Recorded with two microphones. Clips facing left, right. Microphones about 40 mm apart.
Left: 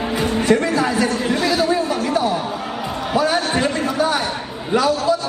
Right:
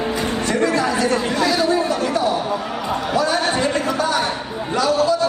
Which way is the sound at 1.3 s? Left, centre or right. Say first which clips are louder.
Even; centre.